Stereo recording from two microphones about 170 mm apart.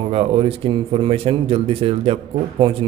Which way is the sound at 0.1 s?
35° right (ahead or behind).